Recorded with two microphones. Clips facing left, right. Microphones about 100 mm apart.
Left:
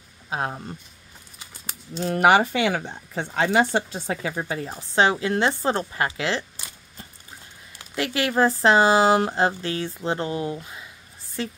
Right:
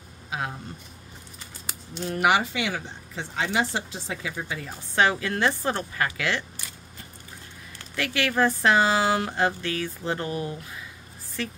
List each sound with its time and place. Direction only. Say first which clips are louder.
0.3 s speech: left 4 dB; 40° left (ahead or behind)
2.0 s speech: left 5 dB; 50° left (ahead or behind); by 6.4 s 25° left (ahead or behind)
7.8 s speech: left 2 dB; 25° left (ahead or behind)